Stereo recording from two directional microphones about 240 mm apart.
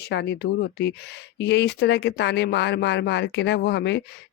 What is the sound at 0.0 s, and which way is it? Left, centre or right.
Speech, left.